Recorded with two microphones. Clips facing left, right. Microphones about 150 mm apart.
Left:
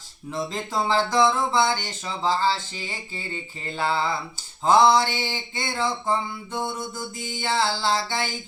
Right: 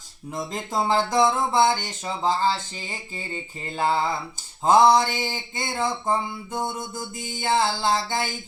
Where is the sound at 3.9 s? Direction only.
20° right (ahead or behind).